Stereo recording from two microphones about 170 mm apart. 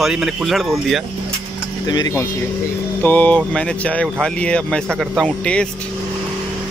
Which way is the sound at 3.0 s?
10° left (ahead or behind).